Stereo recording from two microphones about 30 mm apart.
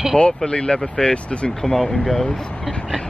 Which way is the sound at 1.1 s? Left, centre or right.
Left.